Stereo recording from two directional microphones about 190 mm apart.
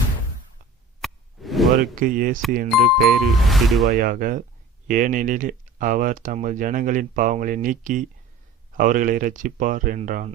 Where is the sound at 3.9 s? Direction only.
50° right (ahead or behind).